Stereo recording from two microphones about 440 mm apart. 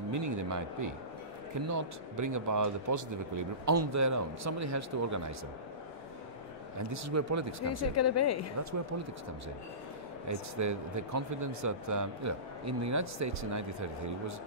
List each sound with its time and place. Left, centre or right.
0.1 s speech: right
6.9 s speech: right
7.6 s a woman's voice: left
10.2 s speech: right